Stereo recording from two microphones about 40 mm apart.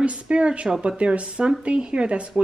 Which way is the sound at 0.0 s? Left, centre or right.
Right.